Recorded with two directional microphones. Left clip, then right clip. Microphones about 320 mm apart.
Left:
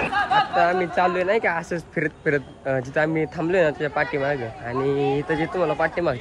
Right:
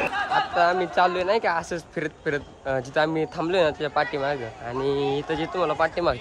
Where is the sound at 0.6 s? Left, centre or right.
Centre.